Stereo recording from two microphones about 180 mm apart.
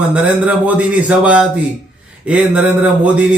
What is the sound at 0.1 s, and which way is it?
A man's voice, 10° right (ahead or behind).